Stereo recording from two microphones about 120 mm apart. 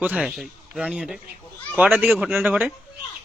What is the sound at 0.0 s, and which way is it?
A man's voice, 5° right (ahead or behind).